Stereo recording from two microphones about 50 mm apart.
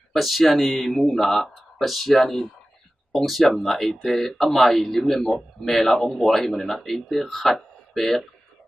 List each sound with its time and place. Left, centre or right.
0.1 s a man's voice: centre